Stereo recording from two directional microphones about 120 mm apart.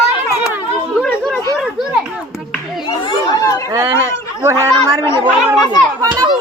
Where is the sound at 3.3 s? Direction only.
30° left (ahead or behind).